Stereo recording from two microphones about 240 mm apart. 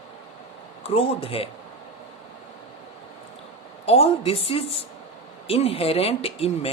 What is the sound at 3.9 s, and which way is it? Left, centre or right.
Speech, left.